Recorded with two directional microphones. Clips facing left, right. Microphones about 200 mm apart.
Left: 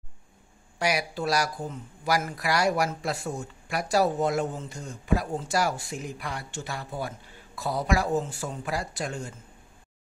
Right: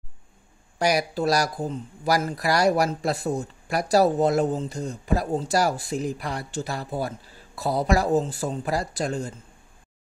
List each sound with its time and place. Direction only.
0.7 s speech: 40° right (ahead or behind)